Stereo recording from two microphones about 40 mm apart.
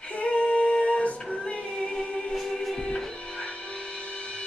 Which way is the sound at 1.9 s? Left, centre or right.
Centre.